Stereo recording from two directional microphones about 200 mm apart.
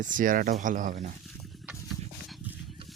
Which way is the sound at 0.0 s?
40° right (ahead or behind).